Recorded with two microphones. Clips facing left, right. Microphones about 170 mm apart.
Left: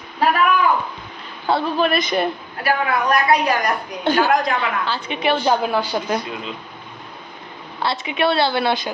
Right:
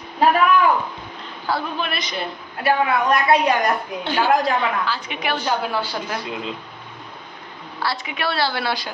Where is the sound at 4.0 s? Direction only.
45° left (ahead or behind).